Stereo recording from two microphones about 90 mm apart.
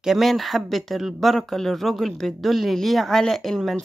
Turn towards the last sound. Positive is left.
turn(degrees=5)  # may be behind; listen again after turning